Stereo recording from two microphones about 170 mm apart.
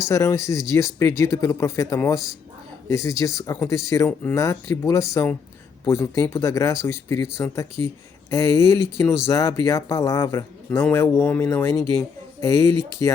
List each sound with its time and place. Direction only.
0.1 s speech: 15° left (ahead or behind)